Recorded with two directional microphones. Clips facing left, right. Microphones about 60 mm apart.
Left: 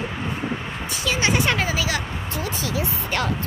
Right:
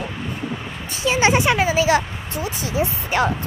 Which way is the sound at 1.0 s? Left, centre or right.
Right.